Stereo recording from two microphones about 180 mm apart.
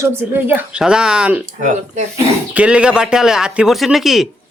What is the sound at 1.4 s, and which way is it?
Speech, 40° right (ahead or behind).